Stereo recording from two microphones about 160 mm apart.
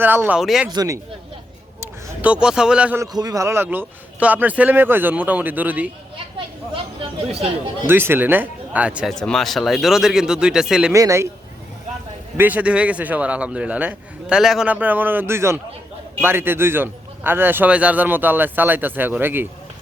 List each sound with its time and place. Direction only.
0.0 s a man's voice: 10° right (ahead or behind)
0.7 s speech: 25° right (ahead or behind)
1.8 s speech: 10° right (ahead or behind)
3.0 s a man's voice: 25° right (ahead or behind)
7.9 s a man's voice: 15° right (ahead or behind)
9.1 s speech: 5° left (ahead or behind)
10.9 s speech: 20° right (ahead or behind)
12.4 s a man's voice: 10° right (ahead or behind)